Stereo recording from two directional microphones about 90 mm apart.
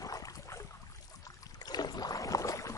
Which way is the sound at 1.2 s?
45° left (ahead or behind).